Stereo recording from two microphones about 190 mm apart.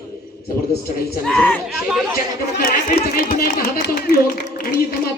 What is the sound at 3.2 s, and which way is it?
Speech, 50° left (ahead or behind).